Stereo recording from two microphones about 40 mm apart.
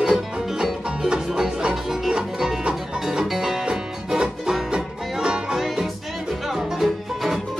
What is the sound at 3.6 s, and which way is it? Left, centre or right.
Music, right.